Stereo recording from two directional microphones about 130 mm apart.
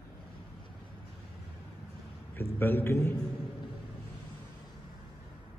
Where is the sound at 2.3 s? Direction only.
15° left (ahead or behind).